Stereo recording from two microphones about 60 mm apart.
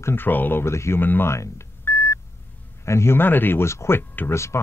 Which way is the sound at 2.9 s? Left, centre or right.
Left.